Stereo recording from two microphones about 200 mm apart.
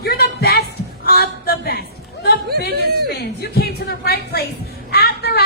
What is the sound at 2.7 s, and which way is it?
Speech, 50° right (ahead or behind).